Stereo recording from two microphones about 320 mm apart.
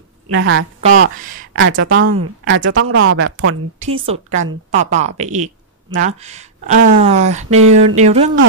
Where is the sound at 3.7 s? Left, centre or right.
Centre.